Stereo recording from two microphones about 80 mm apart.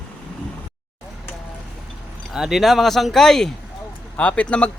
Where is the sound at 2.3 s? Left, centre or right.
Centre.